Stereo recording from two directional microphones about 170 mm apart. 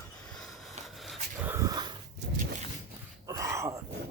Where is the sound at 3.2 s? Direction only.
20° right (ahead or behind).